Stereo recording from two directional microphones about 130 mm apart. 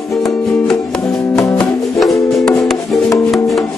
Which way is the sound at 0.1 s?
Centre (ahead or behind).